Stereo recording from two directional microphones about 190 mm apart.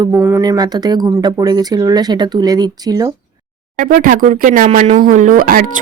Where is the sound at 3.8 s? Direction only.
45° right (ahead or behind).